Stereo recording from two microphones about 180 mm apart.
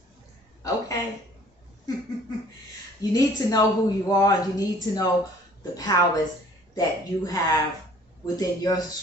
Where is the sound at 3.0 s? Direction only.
20° left (ahead or behind).